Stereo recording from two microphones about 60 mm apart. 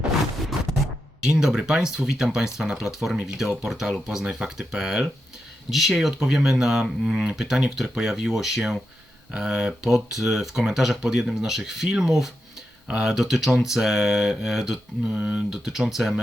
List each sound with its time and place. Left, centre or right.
1.2 s speech: centre
15.1 s speech: centre
15.5 s speech: centre